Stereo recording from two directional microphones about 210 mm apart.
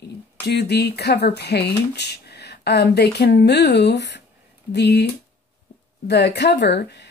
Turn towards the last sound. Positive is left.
turn(degrees=55)  # may be behind; listen again after turning